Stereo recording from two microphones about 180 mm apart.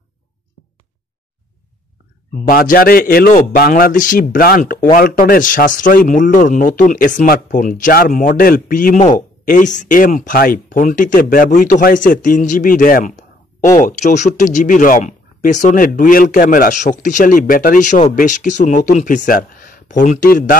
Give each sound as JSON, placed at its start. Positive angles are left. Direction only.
{"t": 2.4, "sound": "speech", "side_deg": 55}